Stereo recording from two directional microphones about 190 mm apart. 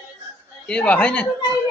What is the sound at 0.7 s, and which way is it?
Speech, 5° left (ahead or behind).